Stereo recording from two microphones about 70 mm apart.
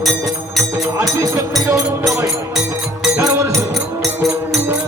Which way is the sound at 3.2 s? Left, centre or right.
Right.